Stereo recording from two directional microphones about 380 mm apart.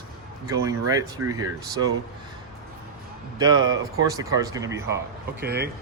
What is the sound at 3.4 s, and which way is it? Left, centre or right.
Speech, centre.